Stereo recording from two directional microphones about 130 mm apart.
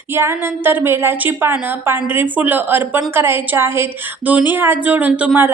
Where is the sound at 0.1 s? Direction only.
20° right (ahead or behind).